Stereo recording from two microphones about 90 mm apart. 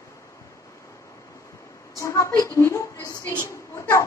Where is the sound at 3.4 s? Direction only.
40° left (ahead or behind).